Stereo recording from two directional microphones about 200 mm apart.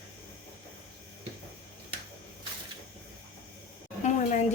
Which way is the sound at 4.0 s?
35° left (ahead or behind).